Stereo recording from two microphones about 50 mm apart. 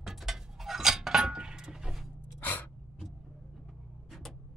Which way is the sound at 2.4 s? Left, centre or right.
Left.